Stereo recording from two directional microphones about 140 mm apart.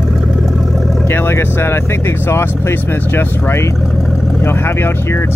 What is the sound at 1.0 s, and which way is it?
Speech, 15° left (ahead or behind).